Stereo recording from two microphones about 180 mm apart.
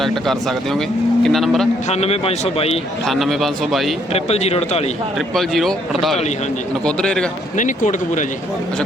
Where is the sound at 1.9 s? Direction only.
35° left (ahead or behind).